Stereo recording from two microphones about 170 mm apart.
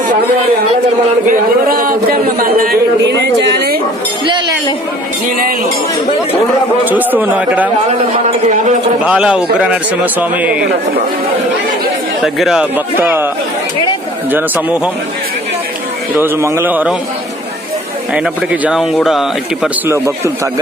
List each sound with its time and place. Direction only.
1.3 s speech: 55° right (ahead or behind); by 3.8 s 75° right (ahead or behind)
6.8 s speech: 10° right (ahead or behind)
9.0 s speech: 5° right (ahead or behind)
12.2 s a man's voice: centre (ahead or behind)
14.3 s speech: 10° right (ahead or behind)
16.1 s speech: 15° right (ahead or behind)
18.1 s a man's voice: 10° right (ahead or behind)
19.9 s speech: 15° right (ahead or behind)